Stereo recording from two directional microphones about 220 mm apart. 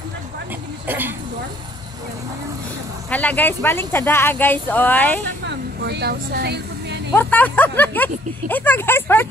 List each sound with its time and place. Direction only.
0.8 s speech: 10° right (ahead or behind)
3.1 s speech: 5° left (ahead or behind)
5.5 s vehicle: 50° right (ahead or behind)
7.2 s speech: 5° left (ahead or behind)